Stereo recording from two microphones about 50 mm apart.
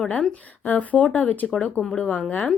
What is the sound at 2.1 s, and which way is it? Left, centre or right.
Speech, left.